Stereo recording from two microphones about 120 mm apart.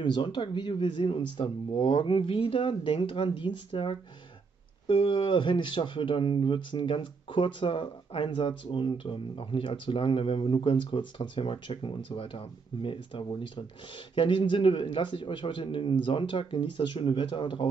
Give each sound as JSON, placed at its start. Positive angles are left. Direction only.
{"t": 0.0, "sound": "speech", "side_deg": 40}